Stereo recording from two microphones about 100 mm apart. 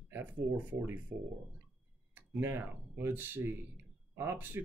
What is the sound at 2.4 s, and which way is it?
Speech, 25° right (ahead or behind).